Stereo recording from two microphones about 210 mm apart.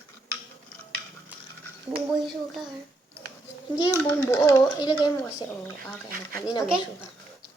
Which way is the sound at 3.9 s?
15° left (ahead or behind).